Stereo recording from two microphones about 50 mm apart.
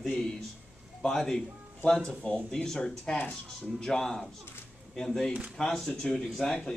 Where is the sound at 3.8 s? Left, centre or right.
Centre.